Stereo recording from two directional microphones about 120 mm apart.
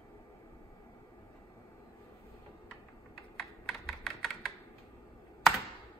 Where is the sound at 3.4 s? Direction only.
Centre (ahead or behind).